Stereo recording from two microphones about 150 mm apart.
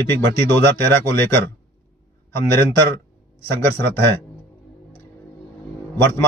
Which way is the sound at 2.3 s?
15° left (ahead or behind).